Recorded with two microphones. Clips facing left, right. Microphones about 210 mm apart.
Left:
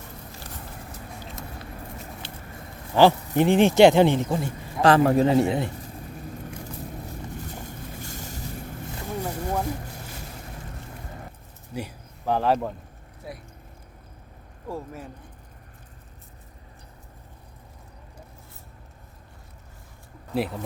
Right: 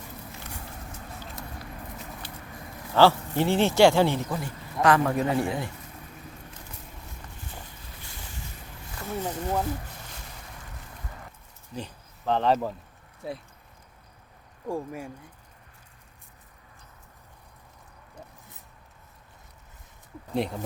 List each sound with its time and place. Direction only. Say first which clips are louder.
2.2 s a sound: left 1 dB; 25° left (ahead or behind)
2.9 s speech: left 2 dB; 15° left (ahead or behind)
7.6 s vehicle: left 9 dB; 45° left (ahead or behind)
9.2 s a sound: even; 10° left (ahead or behind)
11.7 s speech: left 3 dB; 10° left (ahead or behind)
14.7 s speech: right 3 dB; 10° right (ahead or behind)
20.3 s speech: left 1 dB; 5° left (ahead or behind)